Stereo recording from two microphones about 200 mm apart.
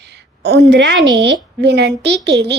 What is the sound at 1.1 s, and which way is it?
A woman's voice, 60° right (ahead or behind).